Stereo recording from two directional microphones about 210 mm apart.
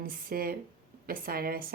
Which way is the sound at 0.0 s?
45° right (ahead or behind).